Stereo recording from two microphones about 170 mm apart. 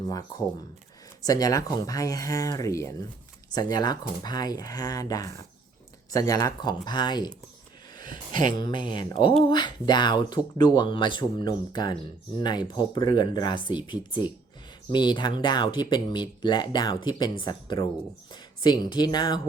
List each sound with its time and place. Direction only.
0.1 s speech: 20° left (ahead or behind)
8.1 s speech: 50° right (ahead or behind)
8.5 s speech: 30° left (ahead or behind)